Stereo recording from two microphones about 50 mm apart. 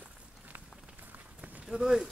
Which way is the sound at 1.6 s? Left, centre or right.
Centre.